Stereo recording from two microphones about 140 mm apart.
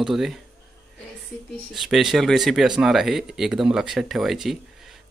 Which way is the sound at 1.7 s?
Centre (ahead or behind).